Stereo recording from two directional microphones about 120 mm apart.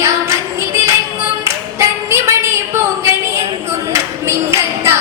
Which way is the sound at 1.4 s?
25° right (ahead or behind).